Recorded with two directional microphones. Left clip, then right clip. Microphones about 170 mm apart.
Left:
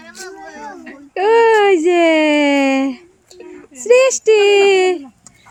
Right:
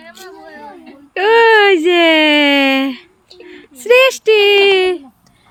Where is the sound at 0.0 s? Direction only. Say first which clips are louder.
Left 2 dB; 75° left (ahead or behind).